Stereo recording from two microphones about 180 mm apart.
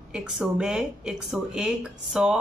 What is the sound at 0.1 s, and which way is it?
Speech, 5° right (ahead or behind).